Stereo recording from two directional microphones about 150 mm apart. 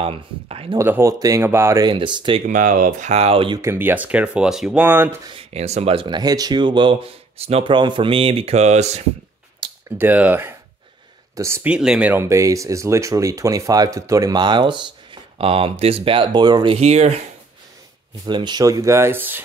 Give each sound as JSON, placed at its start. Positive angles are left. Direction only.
{"t": 0.0, "sound": "speech", "side_deg": -40}
{"t": 0.7, "sound": "speech", "side_deg": -15}
{"t": 1.9, "sound": "speech", "side_deg": -30}
{"t": 2.4, "sound": "speech", "side_deg": -60}
{"t": 3.5, "sound": "speech", "side_deg": -15}
{"t": 5.3, "sound": "speech", "side_deg": -40}
{"t": 9.8, "sound": "speech", "side_deg": -15}
{"t": 11.7, "sound": "speech", "side_deg": -5}
{"t": 16.7, "sound": "speech", "side_deg": -50}
{"t": 18.2, "sound": "speech", "side_deg": -30}